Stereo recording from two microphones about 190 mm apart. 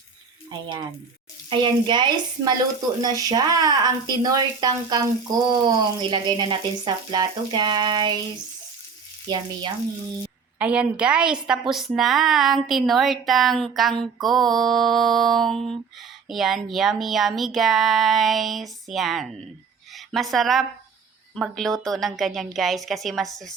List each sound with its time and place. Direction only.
1.5 s speech: 25° right (ahead or behind)
9.3 s speech: 25° right (ahead or behind)
10.6 s speech: 5° right (ahead or behind)